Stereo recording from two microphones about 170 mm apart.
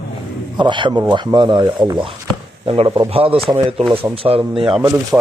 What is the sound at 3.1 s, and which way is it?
A man's voice, 35° right (ahead or behind).